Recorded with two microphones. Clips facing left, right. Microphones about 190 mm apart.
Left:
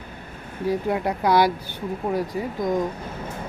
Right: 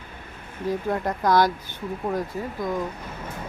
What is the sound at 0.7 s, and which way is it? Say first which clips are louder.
Speech: left 2 dB; 10° left (ahead or behind).